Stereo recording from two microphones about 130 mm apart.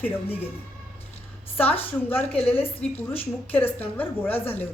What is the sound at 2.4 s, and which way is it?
A woman's voice, 10° left (ahead or behind).